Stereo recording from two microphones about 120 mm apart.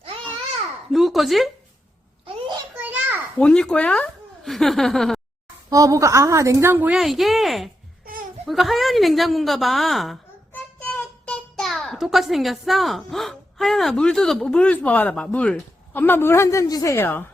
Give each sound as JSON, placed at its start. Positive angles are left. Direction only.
{"t": 0.9, "sound": "a woman's voice", "side_deg": 0}
{"t": 2.7, "sound": "a sound", "side_deg": -15}
{"t": 3.3, "sound": "a woman's voice", "side_deg": 5}
{"t": 5.7, "sound": "a woman's voice", "side_deg": -30}
{"t": 6.9, "sound": "a woman's voice", "side_deg": 0}
{"t": 10.5, "sound": "a child's voice", "side_deg": 15}